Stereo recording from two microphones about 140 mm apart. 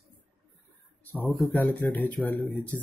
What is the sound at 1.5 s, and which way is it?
Speech, 15° left (ahead or behind).